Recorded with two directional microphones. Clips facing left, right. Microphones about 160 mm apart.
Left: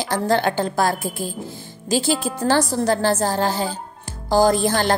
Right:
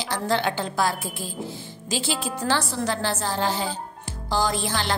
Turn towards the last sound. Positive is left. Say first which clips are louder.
# left 8 dB
turn(degrees=45)  # may be behind; listen again after turning